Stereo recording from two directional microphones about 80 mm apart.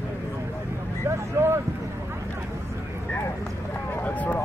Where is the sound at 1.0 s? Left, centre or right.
Right.